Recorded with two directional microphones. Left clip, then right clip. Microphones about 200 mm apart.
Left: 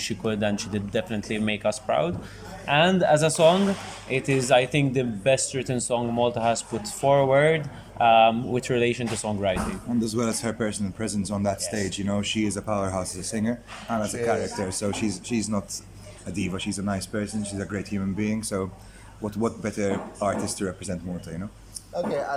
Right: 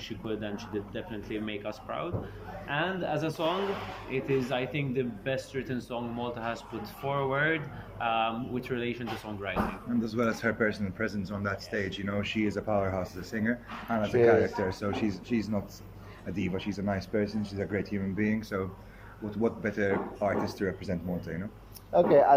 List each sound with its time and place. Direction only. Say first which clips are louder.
0.0 s speech: left 9 dB; 50° left (ahead or behind)
10.0 s speech: left 2 dB; 15° left (ahead or behind)
21.9 s speech: right 7 dB; 20° right (ahead or behind)